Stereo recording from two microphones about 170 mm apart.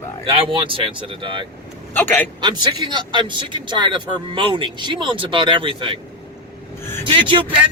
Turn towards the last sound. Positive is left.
turn(degrees=-30)  # may be behind; listen again after turning